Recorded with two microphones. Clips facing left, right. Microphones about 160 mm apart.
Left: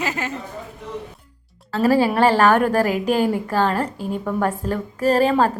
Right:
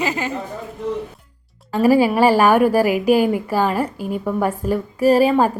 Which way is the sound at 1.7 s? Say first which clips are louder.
Right 3 dB; 10° right (ahead or behind).